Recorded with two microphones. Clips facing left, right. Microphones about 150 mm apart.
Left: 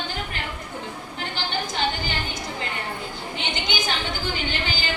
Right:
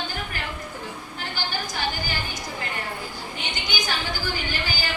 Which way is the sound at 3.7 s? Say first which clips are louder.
Right 1 dB; 25° left (ahead or behind).